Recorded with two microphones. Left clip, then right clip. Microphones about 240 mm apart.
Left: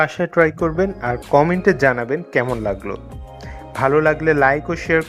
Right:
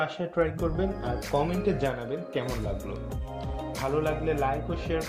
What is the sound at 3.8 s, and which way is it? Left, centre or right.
Speech, left.